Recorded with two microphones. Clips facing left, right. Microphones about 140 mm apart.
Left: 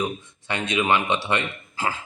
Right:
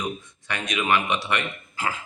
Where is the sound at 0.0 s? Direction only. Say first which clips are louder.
Left 3 dB; 25° left (ahead or behind).